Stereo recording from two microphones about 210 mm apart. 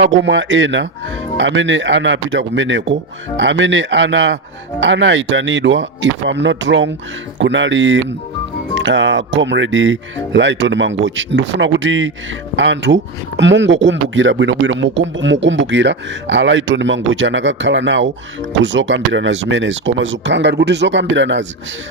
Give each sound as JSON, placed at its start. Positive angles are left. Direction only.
{"t": 0.0, "sound": "speech", "side_deg": -60}